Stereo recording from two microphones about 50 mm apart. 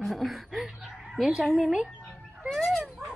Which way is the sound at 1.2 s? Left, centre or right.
Centre.